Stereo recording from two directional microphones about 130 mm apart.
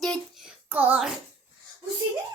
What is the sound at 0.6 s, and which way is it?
Speech, 15° right (ahead or behind).